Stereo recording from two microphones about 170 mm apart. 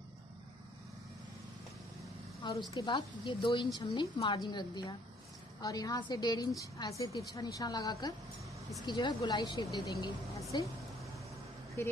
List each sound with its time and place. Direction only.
2.7 s speech: 25° left (ahead or behind)
11.8 s speech: 15° left (ahead or behind)